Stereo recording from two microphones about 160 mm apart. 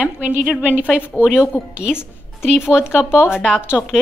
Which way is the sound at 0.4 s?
10° right (ahead or behind).